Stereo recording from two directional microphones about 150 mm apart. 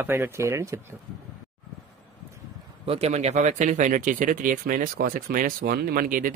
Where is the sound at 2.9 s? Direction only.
45° right (ahead or behind).